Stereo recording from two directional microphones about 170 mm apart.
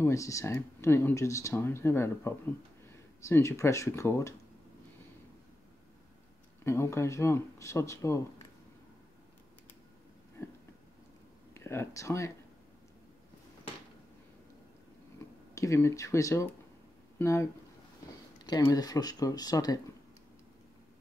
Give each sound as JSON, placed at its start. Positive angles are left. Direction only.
{"t": 0.0, "sound": "speech", "side_deg": 20}
{"t": 6.6, "sound": "speech", "side_deg": 15}
{"t": 11.5, "sound": "speech", "side_deg": 15}
{"t": 15.5, "sound": "speech", "side_deg": 15}